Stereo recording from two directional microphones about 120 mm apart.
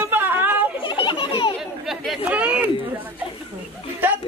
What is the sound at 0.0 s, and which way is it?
Chatter, 15° right (ahead or behind).